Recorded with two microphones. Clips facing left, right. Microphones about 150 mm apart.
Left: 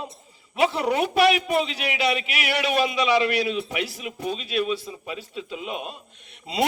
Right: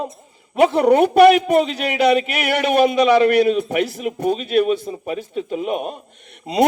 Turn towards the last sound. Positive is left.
turn(degrees=-50)  # may be behind; listen again after turning